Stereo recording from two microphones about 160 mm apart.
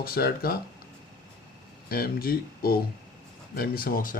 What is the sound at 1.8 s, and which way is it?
Speech, 70° left (ahead or behind).